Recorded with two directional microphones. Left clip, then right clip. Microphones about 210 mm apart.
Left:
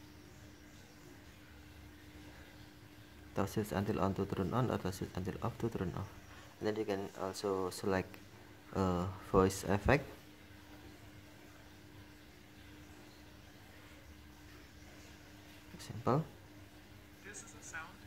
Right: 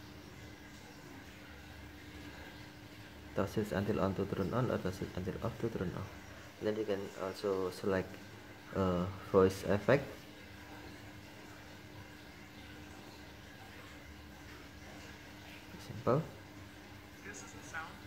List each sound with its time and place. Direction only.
3.3 s speech: 20° left (ahead or behind)
16.1 s speech: 25° left (ahead or behind)
17.7 s music: 10° left (ahead or behind)